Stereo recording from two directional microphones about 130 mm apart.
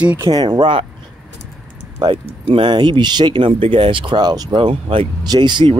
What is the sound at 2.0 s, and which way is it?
Speech, 40° right (ahead or behind).